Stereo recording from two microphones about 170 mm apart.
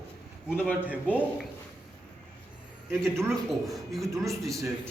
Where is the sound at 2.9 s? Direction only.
15° right (ahead or behind).